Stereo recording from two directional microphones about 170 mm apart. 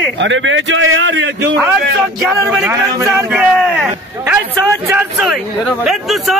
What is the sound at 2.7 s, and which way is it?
A man's voice, 15° right (ahead or behind).